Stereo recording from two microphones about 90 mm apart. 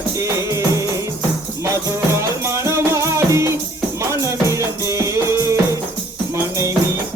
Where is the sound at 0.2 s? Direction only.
35° right (ahead or behind).